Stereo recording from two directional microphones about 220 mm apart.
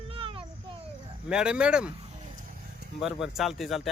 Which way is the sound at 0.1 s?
25° right (ahead or behind).